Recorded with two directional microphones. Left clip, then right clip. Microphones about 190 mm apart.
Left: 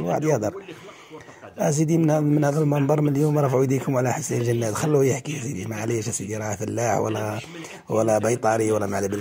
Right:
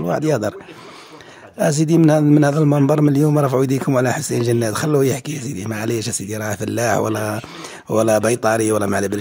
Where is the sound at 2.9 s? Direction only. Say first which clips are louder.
Right 6 dB; 30° right (ahead or behind).